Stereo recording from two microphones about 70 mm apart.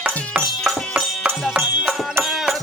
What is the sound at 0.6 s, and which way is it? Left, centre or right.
Music, centre.